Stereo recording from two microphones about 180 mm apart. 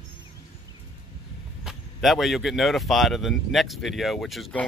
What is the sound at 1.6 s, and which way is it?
Speech, centre (ahead or behind).